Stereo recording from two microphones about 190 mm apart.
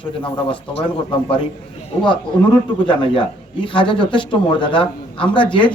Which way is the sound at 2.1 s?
25° left (ahead or behind).